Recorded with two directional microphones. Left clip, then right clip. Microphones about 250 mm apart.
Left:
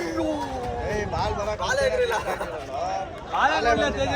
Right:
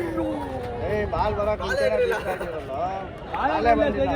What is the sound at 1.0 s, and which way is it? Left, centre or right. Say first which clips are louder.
Speech: right 5 dB; right.